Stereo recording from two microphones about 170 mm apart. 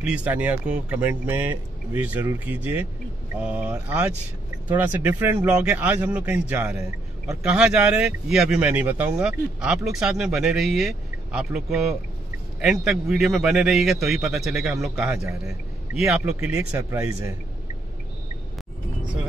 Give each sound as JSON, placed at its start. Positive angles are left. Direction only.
{"t": 0.0, "sound": "a man's voice", "side_deg": -5}
{"t": 16.3, "sound": "speech", "side_deg": -15}